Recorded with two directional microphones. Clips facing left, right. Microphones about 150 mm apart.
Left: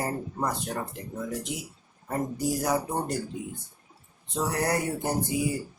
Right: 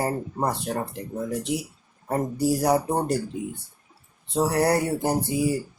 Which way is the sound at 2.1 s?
35° right (ahead or behind).